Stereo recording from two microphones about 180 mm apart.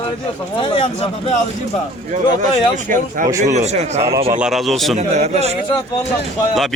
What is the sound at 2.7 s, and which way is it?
A man's voice, 45° right (ahead or behind).